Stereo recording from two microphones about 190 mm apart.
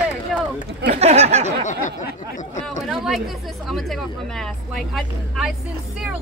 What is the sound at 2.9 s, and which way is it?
Speech, centre (ahead or behind).